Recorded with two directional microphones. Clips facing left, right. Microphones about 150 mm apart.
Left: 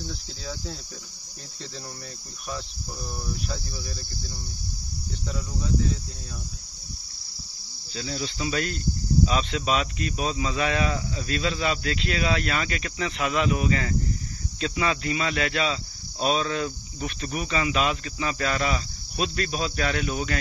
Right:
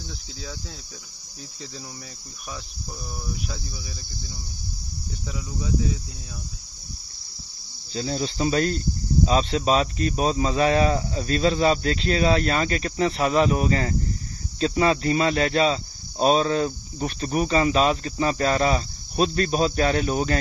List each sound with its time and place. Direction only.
0.0 s cricket: centre (ahead or behind)
3.4 s cricket: centre (ahead or behind)
5.3 s cricket: 5° right (ahead or behind)
7.9 s speech: 35° right (ahead or behind)